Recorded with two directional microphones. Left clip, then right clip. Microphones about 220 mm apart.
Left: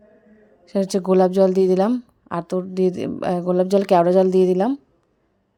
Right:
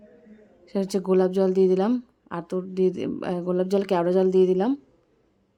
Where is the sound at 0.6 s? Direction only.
15° left (ahead or behind).